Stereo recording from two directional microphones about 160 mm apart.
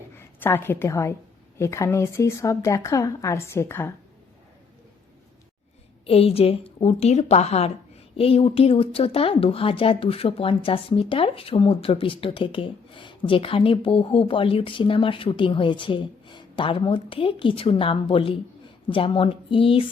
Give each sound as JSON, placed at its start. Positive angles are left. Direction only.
{"t": 0.2, "sound": "a woman's voice", "side_deg": 15}
{"t": 6.1, "sound": "speech", "side_deg": 40}